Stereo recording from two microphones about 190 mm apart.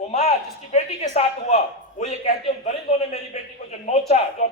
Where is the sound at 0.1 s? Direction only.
35° left (ahead or behind).